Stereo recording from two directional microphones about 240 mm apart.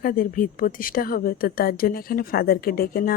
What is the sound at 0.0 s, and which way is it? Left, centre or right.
Speech, left.